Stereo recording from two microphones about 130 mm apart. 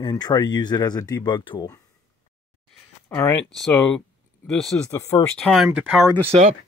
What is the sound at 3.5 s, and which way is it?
Speech, 5° left (ahead or behind).